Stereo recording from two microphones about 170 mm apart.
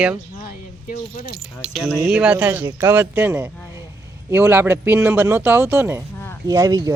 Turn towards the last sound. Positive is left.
turn(degrees=-20)  # may be behind; listen again after turning